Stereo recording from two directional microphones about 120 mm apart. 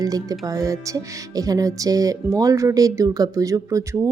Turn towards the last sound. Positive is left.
turn(degrees=-25)  # may be behind; listen again after turning